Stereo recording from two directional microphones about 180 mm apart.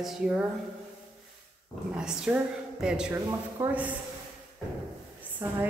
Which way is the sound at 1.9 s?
5° right (ahead or behind).